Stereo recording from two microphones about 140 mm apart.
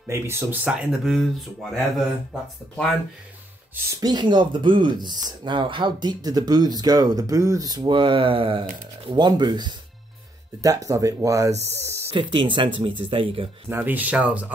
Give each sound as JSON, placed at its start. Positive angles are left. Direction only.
{"t": 0.0, "sound": "speech", "side_deg": -15}
{"t": 4.0, "sound": "speech", "side_deg": -30}
{"t": 12.1, "sound": "speech", "side_deg": -35}
{"t": 13.7, "sound": "speech", "side_deg": -10}